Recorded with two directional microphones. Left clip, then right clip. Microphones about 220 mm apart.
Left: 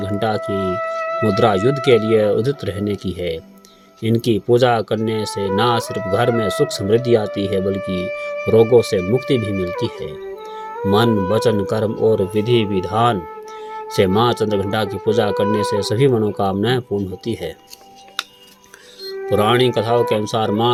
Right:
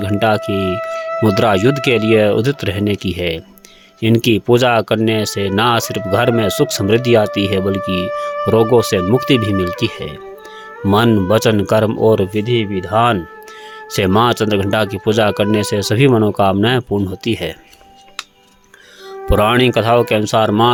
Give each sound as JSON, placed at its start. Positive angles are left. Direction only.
{"t": 0.0, "sound": "speech", "side_deg": -35}
{"t": 19.0, "sound": "speech", "side_deg": -35}